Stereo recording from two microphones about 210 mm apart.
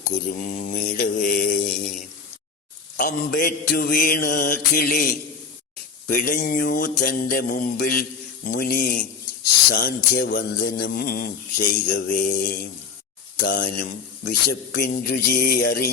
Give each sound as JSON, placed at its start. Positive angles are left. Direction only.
{"t": 0.3, "sound": "mantra", "side_deg": 40}
{"t": 3.0, "sound": "speech", "side_deg": 45}
{"t": 6.1, "sound": "mantra", "side_deg": 45}
{"t": 8.4, "sound": "speech", "side_deg": 45}
{"t": 11.9, "sound": "mantra", "side_deg": 40}
{"t": 13.4, "sound": "speech", "side_deg": 45}